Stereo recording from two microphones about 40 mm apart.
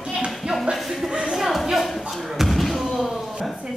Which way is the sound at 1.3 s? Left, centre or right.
Centre.